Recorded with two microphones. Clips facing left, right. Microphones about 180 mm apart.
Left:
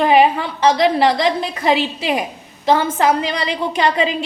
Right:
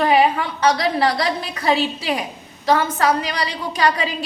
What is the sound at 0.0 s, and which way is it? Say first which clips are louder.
A woman's voice: left 3 dB; 25° left (ahead or behind).